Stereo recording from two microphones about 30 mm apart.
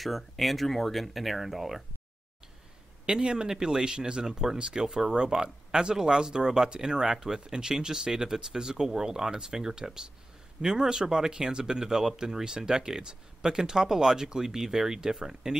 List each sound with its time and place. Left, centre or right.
0.0 s speech: centre
3.1 s speech: right